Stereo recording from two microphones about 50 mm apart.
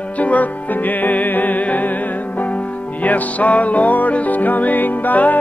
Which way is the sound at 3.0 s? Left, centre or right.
Left.